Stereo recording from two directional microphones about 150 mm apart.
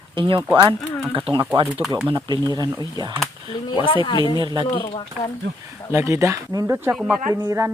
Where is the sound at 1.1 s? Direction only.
35° right (ahead or behind).